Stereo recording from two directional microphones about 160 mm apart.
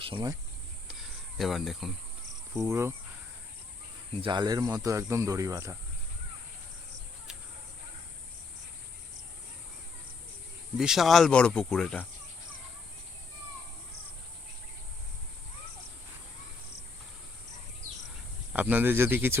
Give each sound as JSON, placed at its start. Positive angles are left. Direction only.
{"t": 0.0, "sound": "speech", "side_deg": -30}
{"t": 0.9, "sound": "a sound", "side_deg": 0}
{"t": 2.6, "sound": "speech", "side_deg": -15}
{"t": 4.2, "sound": "speech", "side_deg": -30}
{"t": 10.8, "sound": "speech", "side_deg": -5}
{"t": 18.5, "sound": "speech", "side_deg": -10}